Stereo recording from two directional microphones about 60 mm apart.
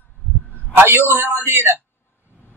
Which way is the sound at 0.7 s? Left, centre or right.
Right.